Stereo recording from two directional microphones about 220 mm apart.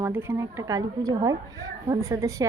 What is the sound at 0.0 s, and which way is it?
A woman's voice, 10° right (ahead or behind).